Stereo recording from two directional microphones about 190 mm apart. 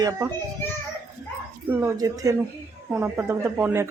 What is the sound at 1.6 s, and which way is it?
Speech, 15° right (ahead or behind).